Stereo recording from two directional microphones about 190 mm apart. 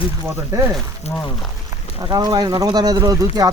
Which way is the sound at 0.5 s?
15° right (ahead or behind).